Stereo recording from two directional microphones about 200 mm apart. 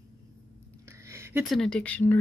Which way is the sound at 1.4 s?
5° left (ahead or behind).